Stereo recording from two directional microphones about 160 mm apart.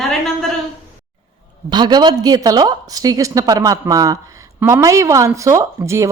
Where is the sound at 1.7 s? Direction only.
25° right (ahead or behind).